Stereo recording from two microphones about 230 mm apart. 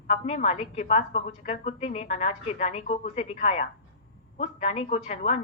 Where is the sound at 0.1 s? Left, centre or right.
Left.